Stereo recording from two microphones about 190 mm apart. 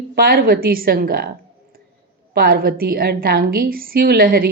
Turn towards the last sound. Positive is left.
turn(degrees=-50)  # may be behind; listen again after turning